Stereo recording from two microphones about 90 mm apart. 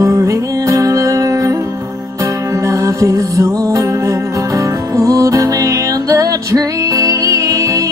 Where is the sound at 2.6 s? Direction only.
35° right (ahead or behind).